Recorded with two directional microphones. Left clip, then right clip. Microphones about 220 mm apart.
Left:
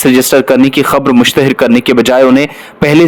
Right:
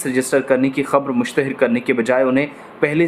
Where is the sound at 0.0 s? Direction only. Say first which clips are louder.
Left 11 dB; 40° left (ahead or behind).